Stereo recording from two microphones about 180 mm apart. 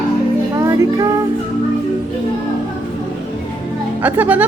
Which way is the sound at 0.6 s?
15° right (ahead or behind).